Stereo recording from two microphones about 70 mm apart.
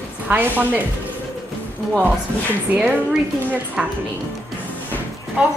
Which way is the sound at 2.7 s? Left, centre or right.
Centre.